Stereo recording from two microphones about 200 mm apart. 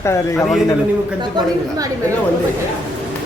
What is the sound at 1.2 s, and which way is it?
Speech, 20° right (ahead or behind).